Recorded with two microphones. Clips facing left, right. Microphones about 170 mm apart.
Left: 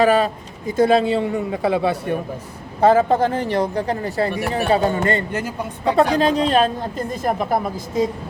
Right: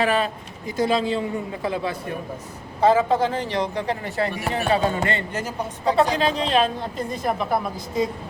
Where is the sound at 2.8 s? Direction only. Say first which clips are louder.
Left 3 dB; 50° left (ahead or behind).